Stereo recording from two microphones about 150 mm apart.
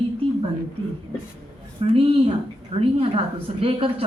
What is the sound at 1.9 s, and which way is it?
Speech, 40° right (ahead or behind).